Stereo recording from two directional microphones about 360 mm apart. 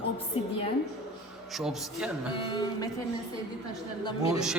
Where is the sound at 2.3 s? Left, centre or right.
Centre.